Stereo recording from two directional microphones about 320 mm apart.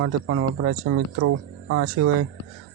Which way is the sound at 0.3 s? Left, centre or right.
Right.